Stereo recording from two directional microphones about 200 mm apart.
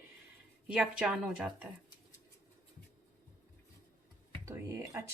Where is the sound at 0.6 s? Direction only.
5° right (ahead or behind).